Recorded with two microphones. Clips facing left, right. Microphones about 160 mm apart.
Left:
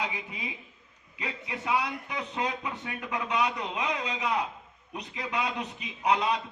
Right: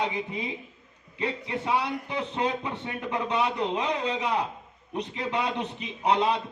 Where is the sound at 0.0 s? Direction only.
30° right (ahead or behind).